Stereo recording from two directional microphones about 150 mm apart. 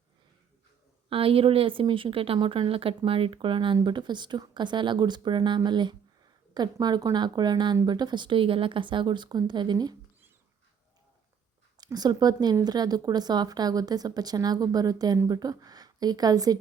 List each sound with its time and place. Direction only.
1.1 s a woman's voice: 40° right (ahead or behind)
11.8 s a woman's voice: 25° right (ahead or behind)